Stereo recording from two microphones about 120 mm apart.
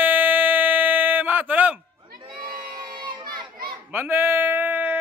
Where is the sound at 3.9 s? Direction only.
20° right (ahead or behind).